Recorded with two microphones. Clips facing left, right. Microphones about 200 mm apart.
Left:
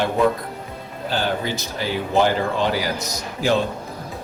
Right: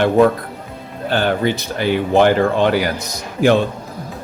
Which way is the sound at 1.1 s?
60° right (ahead or behind).